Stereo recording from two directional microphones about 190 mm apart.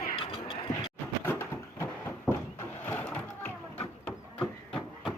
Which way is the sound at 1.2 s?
10° left (ahead or behind).